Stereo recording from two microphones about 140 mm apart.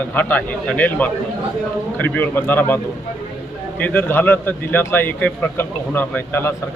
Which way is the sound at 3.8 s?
15° left (ahead or behind).